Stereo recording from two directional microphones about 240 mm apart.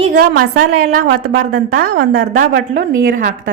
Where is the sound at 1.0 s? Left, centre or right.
Right.